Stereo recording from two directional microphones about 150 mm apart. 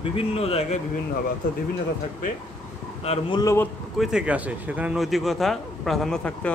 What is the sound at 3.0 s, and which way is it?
Mantra, 40° left (ahead or behind).